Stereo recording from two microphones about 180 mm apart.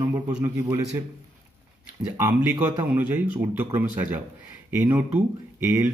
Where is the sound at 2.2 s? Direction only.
10° right (ahead or behind).